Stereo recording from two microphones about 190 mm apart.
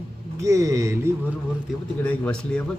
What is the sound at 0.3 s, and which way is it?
Speech, 15° right (ahead or behind).